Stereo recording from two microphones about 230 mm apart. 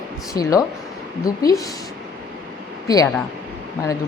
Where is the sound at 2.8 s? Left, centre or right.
Centre.